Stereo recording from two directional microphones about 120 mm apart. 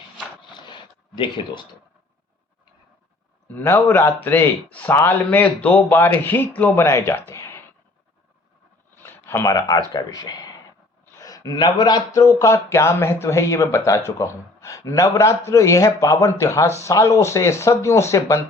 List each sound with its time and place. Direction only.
0.5 s a sound: 40° left (ahead or behind)
3.5 s a man's voice: 20° left (ahead or behind)
9.0 s speech: 20° left (ahead or behind)